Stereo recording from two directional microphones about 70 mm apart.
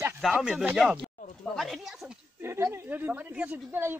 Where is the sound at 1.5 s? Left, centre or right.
Centre.